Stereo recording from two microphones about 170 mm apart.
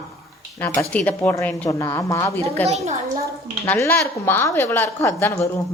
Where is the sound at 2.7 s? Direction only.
40° right (ahead or behind).